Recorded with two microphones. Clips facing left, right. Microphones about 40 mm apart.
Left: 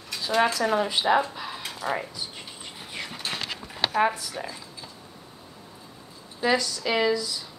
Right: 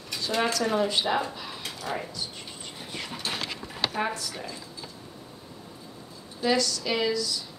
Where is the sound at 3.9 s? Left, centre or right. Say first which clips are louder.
Left 6 dB; centre.